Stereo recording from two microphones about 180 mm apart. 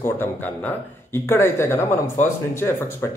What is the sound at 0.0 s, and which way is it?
Speech, 10° left (ahead or behind).